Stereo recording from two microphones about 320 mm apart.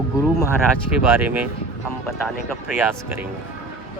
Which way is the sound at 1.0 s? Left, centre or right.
Centre.